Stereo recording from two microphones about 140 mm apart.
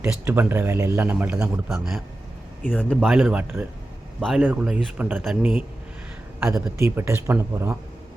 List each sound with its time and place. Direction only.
0.0 s speech: 10° right (ahead or behind)
6.5 s speech: 20° right (ahead or behind)